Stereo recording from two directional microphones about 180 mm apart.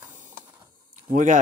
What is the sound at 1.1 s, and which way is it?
Speech, 45° right (ahead or behind).